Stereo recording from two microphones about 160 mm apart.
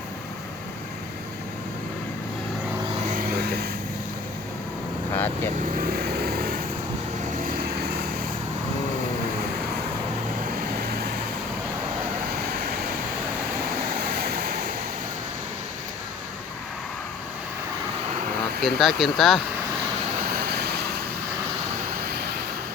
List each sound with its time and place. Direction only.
3.1 s vehicle: 65° right (ahead or behind); by 3.7 s 80° right
5.1 s vehicle: 15° left (ahead or behind)
5.7 s vehicle: 65° right (ahead or behind)
14.2 s waves: 65° right (ahead or behind)
18.6 s speech: centre (ahead or behind)
20.3 s vehicle: 80° right